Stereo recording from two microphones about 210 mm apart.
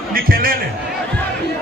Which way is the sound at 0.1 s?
45° right (ahead or behind).